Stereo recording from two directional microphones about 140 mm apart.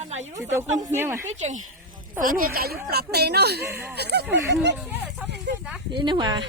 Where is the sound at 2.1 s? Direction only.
80° right.